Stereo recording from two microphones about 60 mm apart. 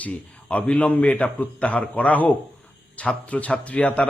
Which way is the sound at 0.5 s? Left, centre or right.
Left.